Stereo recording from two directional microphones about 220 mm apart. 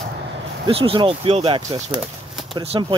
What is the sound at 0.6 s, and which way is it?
Speech, 25° right (ahead or behind).